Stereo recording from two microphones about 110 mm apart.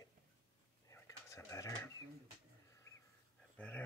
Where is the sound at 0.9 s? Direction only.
30° left (ahead or behind).